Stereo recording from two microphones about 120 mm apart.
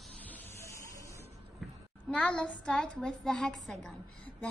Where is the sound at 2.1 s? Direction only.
10° left (ahead or behind).